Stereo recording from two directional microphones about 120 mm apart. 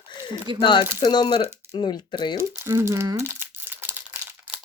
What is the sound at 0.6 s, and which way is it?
A woman's voice, 40° left (ahead or behind).